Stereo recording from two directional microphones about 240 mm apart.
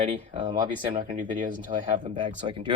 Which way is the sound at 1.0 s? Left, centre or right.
Right.